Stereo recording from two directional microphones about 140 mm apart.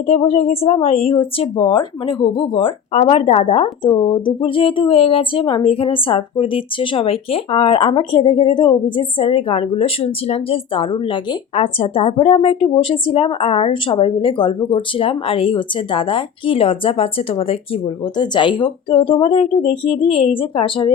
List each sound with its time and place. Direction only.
0.0 s a woman's voice: 45° left (ahead or behind)